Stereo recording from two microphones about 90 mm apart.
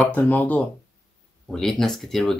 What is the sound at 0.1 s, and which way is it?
Speech, 20° left (ahead or behind).